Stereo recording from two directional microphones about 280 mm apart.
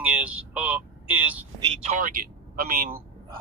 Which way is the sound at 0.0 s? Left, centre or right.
Centre.